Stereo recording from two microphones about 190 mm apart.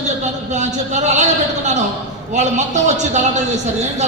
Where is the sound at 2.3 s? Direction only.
40° right (ahead or behind).